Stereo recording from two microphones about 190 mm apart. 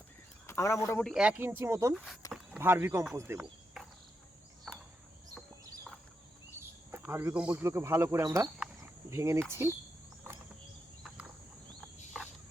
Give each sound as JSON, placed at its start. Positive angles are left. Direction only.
{"t": 0.4, "sound": "speech", "side_deg": 15}
{"t": 1.0, "sound": "speech", "side_deg": -5}
{"t": 2.2, "sound": "a sound", "side_deg": 20}
{"t": 2.6, "sound": "speech", "side_deg": -10}
{"t": 6.6, "sound": "speech", "side_deg": -10}